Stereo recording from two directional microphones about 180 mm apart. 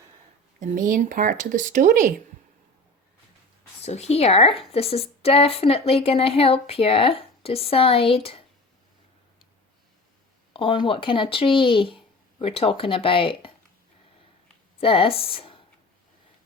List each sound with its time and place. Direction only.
0.6 s speech: 45° right (ahead or behind)
3.8 s speech: 35° left (ahead or behind)
10.5 s speech: 30° left (ahead or behind)
14.8 s speech: 30° left (ahead or behind)